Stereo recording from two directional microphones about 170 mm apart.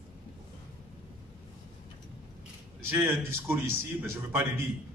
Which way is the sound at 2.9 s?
15° right (ahead or behind).